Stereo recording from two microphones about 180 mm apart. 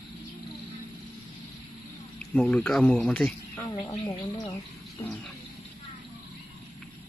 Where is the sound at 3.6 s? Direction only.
25° left (ahead or behind).